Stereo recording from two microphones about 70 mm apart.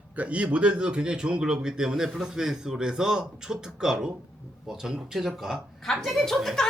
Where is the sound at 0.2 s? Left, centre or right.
Centre.